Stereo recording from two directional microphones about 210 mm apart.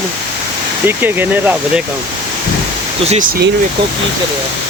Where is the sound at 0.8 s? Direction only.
10° right (ahead or behind).